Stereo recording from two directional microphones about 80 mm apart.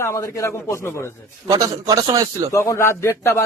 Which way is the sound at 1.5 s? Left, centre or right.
Right.